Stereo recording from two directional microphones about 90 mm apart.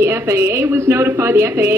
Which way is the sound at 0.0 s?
30° right (ahead or behind).